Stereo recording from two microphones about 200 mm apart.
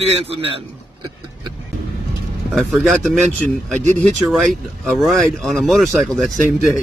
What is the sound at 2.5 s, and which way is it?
Speech, centre (ahead or behind).